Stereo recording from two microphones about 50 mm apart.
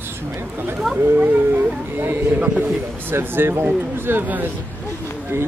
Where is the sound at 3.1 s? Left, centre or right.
Right.